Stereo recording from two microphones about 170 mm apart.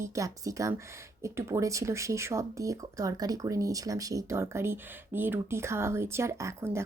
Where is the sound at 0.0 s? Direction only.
20° right (ahead or behind).